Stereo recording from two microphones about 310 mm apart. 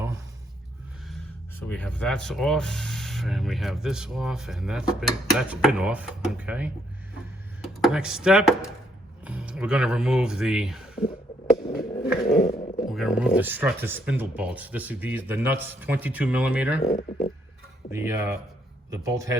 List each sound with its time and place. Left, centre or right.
1.0 s speech: centre
12.2 s a sound: centre
12.9 s speech: centre
16.8 s speech: centre
17.9 s speech: centre